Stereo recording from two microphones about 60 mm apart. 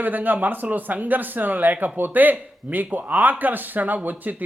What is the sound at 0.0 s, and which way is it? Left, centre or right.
Speech, right.